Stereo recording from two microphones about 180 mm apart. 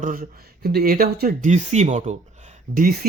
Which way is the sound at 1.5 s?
40° right (ahead or behind).